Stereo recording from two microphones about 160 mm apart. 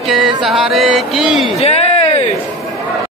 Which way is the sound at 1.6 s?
40° left (ahead or behind).